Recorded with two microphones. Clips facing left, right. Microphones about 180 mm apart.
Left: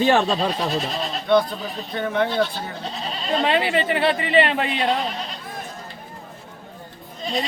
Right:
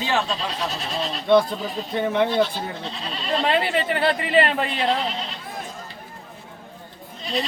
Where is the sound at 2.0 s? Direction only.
15° right (ahead or behind).